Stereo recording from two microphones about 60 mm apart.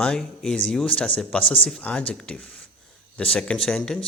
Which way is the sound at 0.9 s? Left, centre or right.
Left.